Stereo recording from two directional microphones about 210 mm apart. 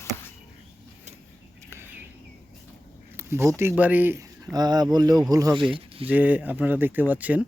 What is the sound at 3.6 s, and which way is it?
Speech, 10° right (ahead or behind).